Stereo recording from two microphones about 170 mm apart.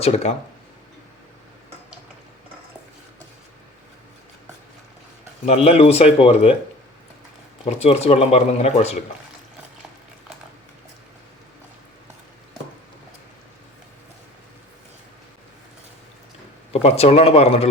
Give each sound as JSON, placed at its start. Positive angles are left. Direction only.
{"t": 0.0, "sound": "speech", "side_deg": 40}
{"t": 5.5, "sound": "speech", "side_deg": 35}
{"t": 7.6, "sound": "speech", "side_deg": 40}
{"t": 16.7, "sound": "speech", "side_deg": 35}